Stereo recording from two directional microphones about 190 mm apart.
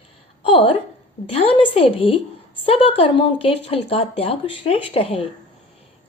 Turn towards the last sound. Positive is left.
turn(degrees=30)  # may be behind; listen again after turning